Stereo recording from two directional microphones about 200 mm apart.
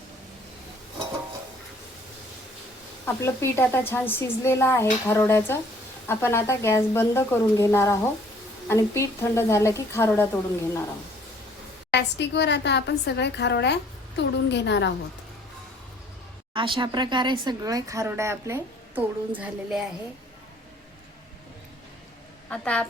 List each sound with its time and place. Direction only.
3.1 s speech: 15° left (ahead or behind)
11.9 s a woman's voice: 60° left (ahead or behind)
16.6 s speech: 25° right (ahead or behind); by 19.9 s 5° right (ahead or behind)
22.4 s speech: 5° left (ahead or behind)